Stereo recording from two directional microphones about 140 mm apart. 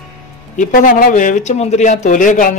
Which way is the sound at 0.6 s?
75° left (ahead or behind).